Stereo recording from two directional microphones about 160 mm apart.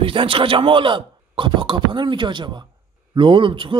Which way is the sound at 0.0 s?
35° right (ahead or behind).